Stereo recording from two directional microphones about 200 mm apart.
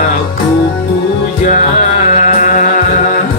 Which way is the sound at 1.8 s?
40° left (ahead or behind).